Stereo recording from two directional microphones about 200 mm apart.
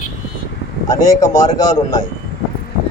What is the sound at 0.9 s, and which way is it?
Speech, 20° left (ahead or behind).